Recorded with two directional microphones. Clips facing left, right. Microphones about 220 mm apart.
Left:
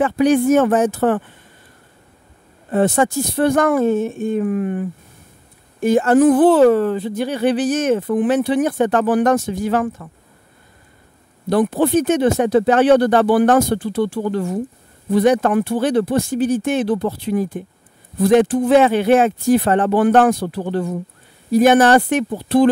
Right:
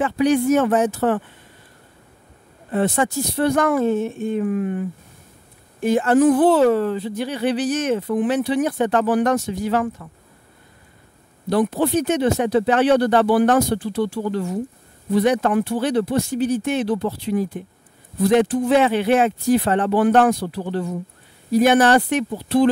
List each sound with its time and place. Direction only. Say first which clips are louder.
0.0 s speech: left 3 dB; 50° left (ahead or behind)
2.7 s speech: left 4 dB; 45° left (ahead or behind)
5.8 s speech: left 3 dB; 45° left (ahead or behind)
11.4 s speech: left 3 dB; 50° left (ahead or behind)